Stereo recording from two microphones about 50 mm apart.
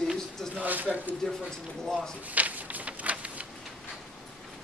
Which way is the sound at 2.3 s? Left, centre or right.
Right.